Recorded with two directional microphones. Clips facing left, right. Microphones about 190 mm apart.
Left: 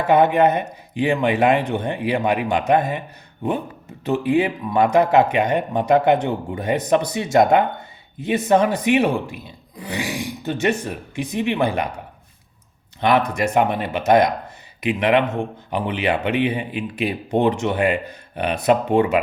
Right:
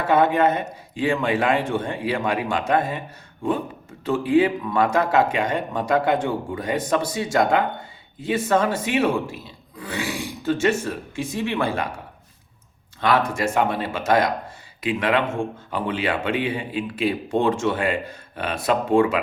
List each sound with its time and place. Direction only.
0.0 s speech: 15° left (ahead or behind)
4.0 s speech: 20° left (ahead or behind)
13.0 s speech: 20° left (ahead or behind)